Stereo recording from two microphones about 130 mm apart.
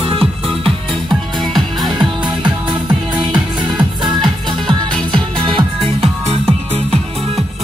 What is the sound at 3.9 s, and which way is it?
Music, 35° right (ahead or behind).